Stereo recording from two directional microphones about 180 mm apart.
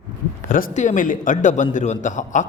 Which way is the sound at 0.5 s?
45° left (ahead or behind).